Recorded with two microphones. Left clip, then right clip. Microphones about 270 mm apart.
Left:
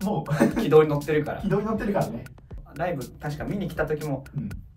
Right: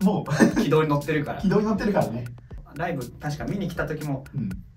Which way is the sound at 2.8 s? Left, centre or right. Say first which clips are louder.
Left 1 dB; centre.